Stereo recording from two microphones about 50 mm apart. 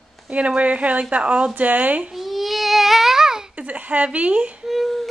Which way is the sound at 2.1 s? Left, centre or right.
Centre.